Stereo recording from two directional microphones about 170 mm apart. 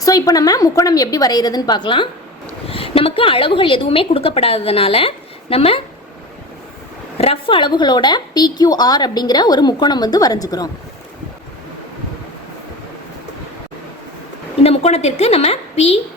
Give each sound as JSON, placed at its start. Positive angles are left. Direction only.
{"t": 0.0, "sound": "a woman's voice", "side_deg": 20}
{"t": 7.2, "sound": "a woman's voice", "side_deg": 30}
{"t": 14.6, "sound": "a woman's voice", "side_deg": 40}